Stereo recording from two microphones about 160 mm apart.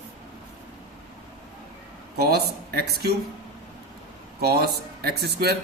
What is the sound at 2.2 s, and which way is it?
Speech, 80° right.